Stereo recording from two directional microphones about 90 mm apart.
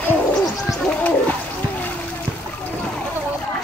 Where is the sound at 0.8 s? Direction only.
15° left (ahead or behind).